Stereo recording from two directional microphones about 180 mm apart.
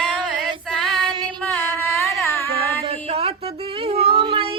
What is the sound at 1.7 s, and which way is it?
Carnatic music, 15° left (ahead or behind).